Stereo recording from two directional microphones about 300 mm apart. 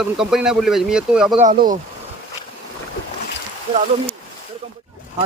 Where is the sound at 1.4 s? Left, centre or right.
Right.